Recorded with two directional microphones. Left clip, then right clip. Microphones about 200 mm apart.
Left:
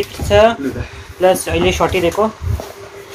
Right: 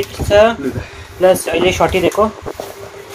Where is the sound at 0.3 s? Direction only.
10° left (ahead or behind).